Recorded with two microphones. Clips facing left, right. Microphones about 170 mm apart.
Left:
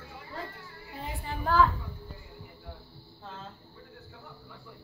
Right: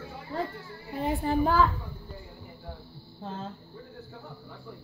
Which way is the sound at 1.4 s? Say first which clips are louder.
Left 1 dB; 10° right (ahead or behind).